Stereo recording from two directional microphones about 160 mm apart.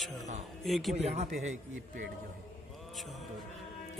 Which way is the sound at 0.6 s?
Centre (ahead or behind).